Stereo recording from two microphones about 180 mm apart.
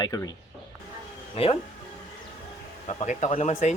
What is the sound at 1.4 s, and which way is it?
Speech, 35° left (ahead or behind).